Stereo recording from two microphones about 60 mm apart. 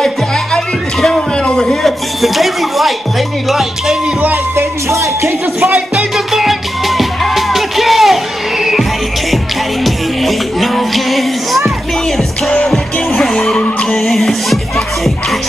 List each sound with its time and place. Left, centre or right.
1.4 s music: centre
4.6 s music: right
5.6 s music: centre
9.8 s music: centre